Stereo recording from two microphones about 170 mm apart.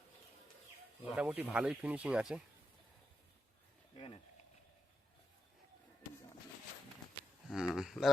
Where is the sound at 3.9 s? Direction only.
30° left (ahead or behind).